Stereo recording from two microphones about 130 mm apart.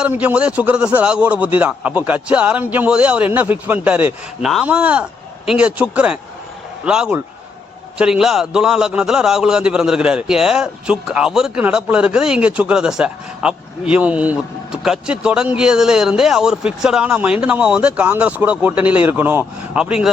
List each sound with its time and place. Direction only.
0.0 s a man's voice: 10° right (ahead or behind)